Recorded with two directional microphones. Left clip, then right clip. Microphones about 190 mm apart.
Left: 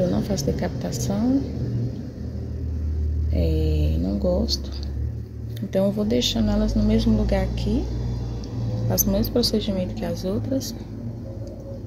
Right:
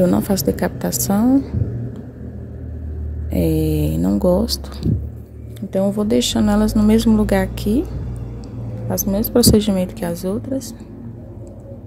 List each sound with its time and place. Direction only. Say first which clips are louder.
0.0 s a woman's voice: right 7 dB; 45° right (ahead or behind)
3.3 s a woman's voice: right 8 dB; 45° right (ahead or behind)
4.8 s vehicle: right 15 dB; 40° right (ahead or behind)
5.7 s speech: right 3 dB; 20° right (ahead or behind)
6.0 s a woman's voice: right 5 dB; 40° right (ahead or behind)
8.8 s speech: right 3 dB; 25° right (ahead or behind)
9.3 s a woman's voice: right 8 dB; 50° right (ahead or behind)
10.3 s speech: right 2 dB; 20° right (ahead or behind)